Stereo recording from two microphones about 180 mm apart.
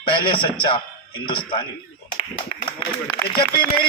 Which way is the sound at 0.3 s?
30° left (ahead or behind).